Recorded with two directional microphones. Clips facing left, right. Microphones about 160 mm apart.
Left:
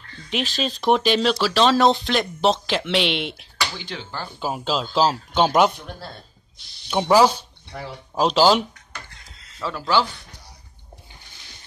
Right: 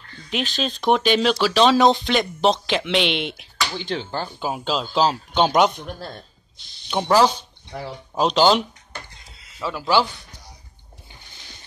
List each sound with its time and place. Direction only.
0.2 s speech: centre (ahead or behind)
3.8 s speech: 25° right (ahead or behind)
4.4 s speech: centre (ahead or behind)
6.9 s speech: 5° left (ahead or behind)
9.6 s speech: 10° right (ahead or behind)